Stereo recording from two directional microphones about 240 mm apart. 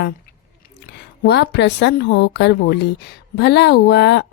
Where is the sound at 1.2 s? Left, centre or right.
Left.